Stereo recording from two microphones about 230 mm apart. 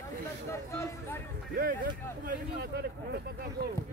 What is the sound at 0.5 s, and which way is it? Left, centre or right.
Speech, centre.